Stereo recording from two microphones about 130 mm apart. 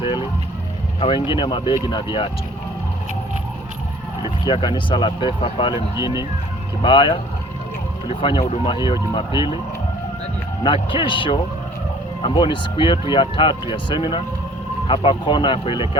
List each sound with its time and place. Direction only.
0.0 s speech: 40° left (ahead or behind)
4.2 s speech: 35° left (ahead or behind); by 8.6 s 50° left (ahead or behind)
8.6 s speech: 35° left (ahead or behind)
10.6 s speech: 40° left (ahead or behind)